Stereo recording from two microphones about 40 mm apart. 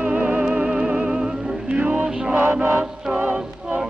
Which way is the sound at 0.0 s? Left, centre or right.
Right.